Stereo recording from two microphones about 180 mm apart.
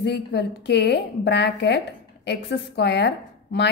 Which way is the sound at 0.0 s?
65° left (ahead or behind).